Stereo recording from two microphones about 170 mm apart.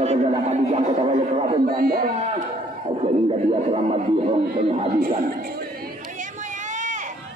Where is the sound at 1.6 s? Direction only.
60° right (ahead or behind).